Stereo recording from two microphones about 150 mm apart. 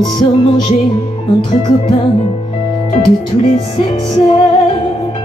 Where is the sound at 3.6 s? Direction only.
35° left (ahead or behind).